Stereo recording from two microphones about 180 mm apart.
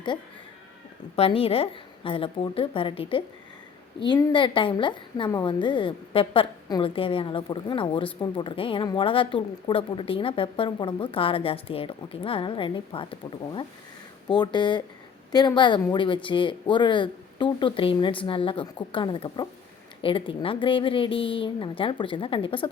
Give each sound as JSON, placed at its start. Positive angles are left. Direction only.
{"t": 1.1, "sound": "a woman's voice", "side_deg": 30}